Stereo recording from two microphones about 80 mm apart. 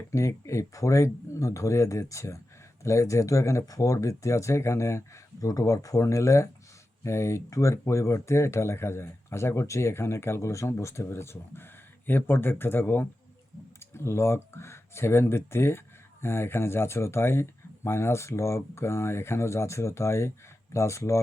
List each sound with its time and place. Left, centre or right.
0.1 s speech: left